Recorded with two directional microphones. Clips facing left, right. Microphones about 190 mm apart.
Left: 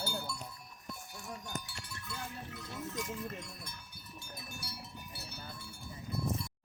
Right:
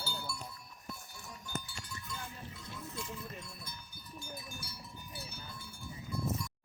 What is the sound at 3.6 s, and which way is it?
Cowbell, 65° left (ahead or behind).